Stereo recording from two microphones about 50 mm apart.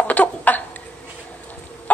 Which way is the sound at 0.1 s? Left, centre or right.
Left.